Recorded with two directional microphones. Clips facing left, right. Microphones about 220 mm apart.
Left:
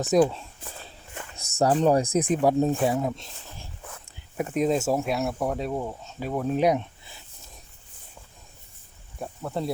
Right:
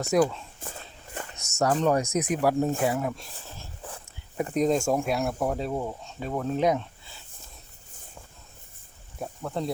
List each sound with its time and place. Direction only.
0.1 s speech: 20° left (ahead or behind)
0.6 s speech: 45° right (ahead or behind)
1.4 s speech: 35° left (ahead or behind); by 3.7 s 15° left (ahead or behind)
4.4 s speech: 5° left (ahead or behind)
9.1 s speech: 5° left (ahead or behind)